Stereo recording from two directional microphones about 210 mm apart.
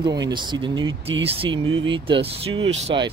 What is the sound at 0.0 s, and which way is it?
Speech, 20° right (ahead or behind).